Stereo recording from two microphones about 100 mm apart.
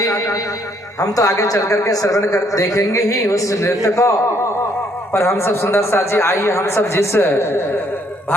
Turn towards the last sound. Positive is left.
turn(degrees=20)  # may be behind; listen again after turning